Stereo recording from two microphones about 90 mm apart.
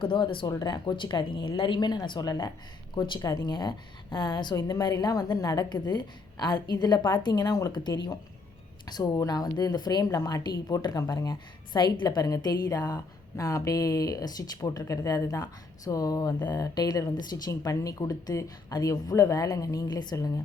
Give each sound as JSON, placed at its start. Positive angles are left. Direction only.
{"t": 0.0, "sound": "speech", "side_deg": 70}
{"t": 0.4, "sound": "a woman's voice", "side_deg": 45}